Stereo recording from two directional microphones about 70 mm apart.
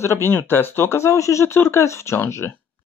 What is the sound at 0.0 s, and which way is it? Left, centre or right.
Speech, left.